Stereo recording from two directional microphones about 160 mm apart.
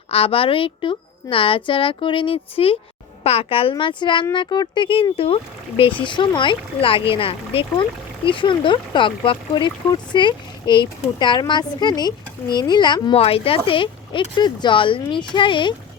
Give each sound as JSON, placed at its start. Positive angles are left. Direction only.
{"t": 0.1, "sound": "speech", "side_deg": 35}